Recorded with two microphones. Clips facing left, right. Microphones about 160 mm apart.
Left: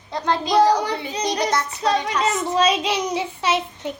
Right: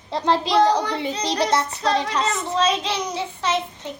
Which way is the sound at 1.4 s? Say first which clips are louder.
Right 4 dB; 30° right (ahead or behind).